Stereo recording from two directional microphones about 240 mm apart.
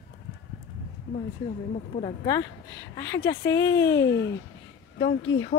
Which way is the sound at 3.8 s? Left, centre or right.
Left.